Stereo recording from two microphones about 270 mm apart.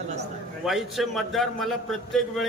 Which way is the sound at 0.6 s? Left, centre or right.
Centre.